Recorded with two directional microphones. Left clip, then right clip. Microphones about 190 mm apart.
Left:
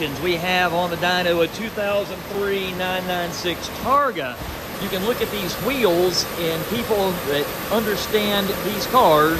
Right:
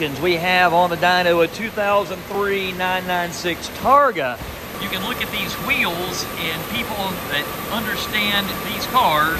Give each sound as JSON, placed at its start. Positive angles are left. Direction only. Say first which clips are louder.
{"t": 0.0, "sound": "speech", "louder": "right 3 dB", "side_deg": 10}
{"t": 5.7, "sound": "speech", "louder": "left 3 dB", "side_deg": 30}
{"t": 7.7, "sound": "speech", "louder": "left 2 dB", "side_deg": 30}